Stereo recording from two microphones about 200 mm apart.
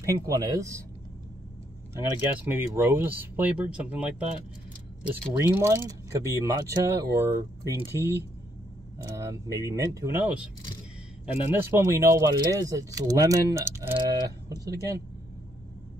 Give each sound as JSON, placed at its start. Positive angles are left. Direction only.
{"t": 0.0, "sound": "speech", "side_deg": -15}
{"t": 2.0, "sound": "speech", "side_deg": -10}
{"t": 5.5, "sound": "speech", "side_deg": -10}
{"t": 11.4, "sound": "speech", "side_deg": -10}